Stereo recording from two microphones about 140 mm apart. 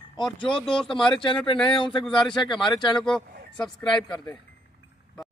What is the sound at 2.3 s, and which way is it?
Speech, 35° left (ahead or behind).